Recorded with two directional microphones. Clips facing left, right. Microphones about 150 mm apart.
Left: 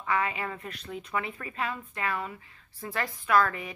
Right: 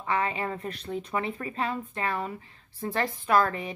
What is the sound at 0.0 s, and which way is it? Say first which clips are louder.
A woman's voice: right 1 dB; 30° right (ahead or behind).